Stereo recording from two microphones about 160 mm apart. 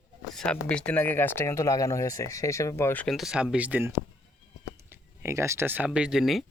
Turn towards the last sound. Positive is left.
turn(degrees=0)  # may be behind; listen again after turning